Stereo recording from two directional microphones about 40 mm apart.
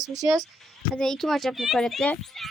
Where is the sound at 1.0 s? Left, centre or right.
Centre.